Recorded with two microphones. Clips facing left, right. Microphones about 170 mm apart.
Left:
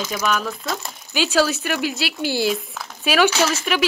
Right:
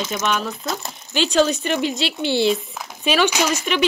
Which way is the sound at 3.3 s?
15° right (ahead or behind).